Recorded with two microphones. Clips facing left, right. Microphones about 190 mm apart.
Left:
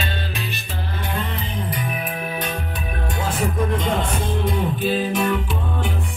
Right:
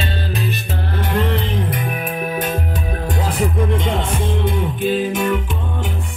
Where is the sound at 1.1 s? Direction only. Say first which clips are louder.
Right 10 dB; 90° right.